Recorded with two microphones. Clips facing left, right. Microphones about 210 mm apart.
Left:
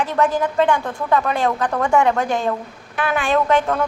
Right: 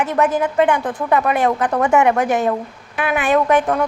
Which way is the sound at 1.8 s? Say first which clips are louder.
Right 2 dB; 5° right (ahead or behind).